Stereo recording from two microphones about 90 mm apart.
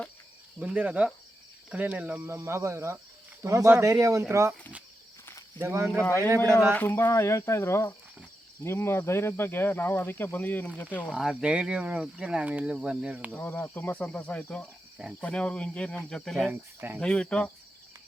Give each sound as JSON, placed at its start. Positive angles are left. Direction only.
{"t": 0.6, "sound": "speech", "side_deg": -15}
{"t": 2.2, "sound": "speech", "side_deg": -30}
{"t": 5.5, "sound": "speech", "side_deg": -30}
{"t": 6.1, "sound": "a man's voice", "side_deg": 30}
{"t": 11.1, "sound": "speech", "side_deg": -5}
{"t": 13.3, "sound": "cricket", "side_deg": 20}
{"t": 16.5, "sound": "speech", "side_deg": -20}
{"t": 17.0, "sound": "cricket", "side_deg": 10}